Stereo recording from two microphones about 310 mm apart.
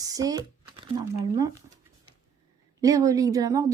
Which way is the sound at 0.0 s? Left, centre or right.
Centre.